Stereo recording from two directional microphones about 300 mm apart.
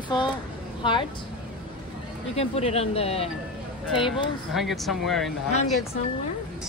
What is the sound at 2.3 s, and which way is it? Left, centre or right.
Speech, centre.